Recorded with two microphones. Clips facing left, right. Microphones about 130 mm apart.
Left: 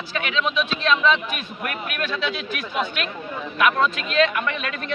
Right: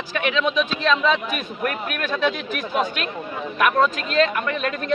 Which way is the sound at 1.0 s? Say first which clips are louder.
Even; 40° right (ahead or behind).